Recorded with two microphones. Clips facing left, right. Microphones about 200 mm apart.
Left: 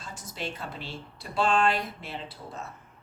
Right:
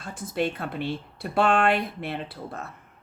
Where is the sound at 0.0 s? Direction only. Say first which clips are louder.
Right 9 dB; 55° right (ahead or behind).